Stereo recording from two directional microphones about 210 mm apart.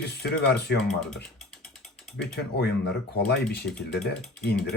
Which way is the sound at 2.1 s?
50° left (ahead or behind).